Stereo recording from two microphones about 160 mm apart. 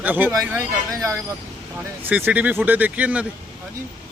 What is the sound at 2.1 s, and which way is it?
Speech, 10° right (ahead or behind).